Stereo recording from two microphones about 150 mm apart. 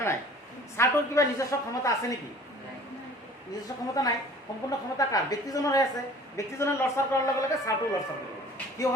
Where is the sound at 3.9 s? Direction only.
25° left (ahead or behind).